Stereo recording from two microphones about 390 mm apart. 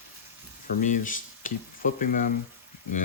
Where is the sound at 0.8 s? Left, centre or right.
Centre.